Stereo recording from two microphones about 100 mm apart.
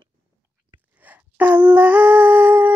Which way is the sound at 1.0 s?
15° right (ahead or behind).